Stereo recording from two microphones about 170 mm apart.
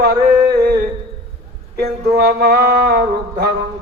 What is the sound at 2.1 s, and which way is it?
Music, 65° right (ahead or behind).